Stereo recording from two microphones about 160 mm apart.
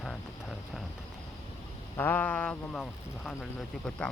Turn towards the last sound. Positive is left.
turn(degrees=5)  # may be behind; listen again after turning